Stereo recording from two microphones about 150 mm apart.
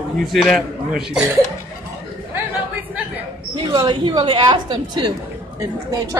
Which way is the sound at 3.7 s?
30° right (ahead or behind).